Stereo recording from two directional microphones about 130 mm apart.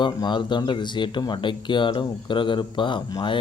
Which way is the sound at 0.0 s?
35° left (ahead or behind).